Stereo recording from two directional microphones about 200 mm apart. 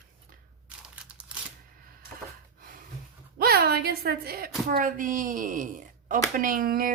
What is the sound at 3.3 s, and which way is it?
A woman's voice, 50° right (ahead or behind).